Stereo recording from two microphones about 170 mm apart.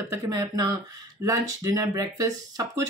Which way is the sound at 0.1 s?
20° right (ahead or behind).